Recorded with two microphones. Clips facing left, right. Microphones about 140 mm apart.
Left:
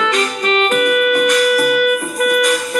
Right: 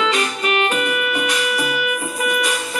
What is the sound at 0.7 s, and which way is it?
Music, 50° left (ahead or behind).